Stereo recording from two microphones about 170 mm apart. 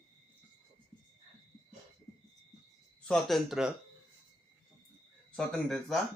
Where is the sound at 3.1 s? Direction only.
Centre (ahead or behind).